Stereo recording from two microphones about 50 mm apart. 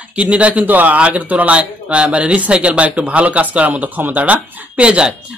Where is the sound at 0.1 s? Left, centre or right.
Right.